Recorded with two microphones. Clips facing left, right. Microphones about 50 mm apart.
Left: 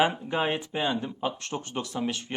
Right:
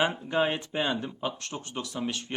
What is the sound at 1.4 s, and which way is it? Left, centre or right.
Speech, left.